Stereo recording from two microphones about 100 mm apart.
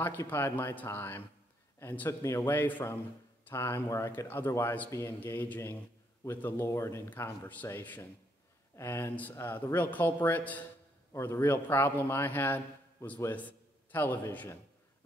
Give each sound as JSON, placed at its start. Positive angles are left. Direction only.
{"t": 0.0, "sound": "a man's voice", "side_deg": 20}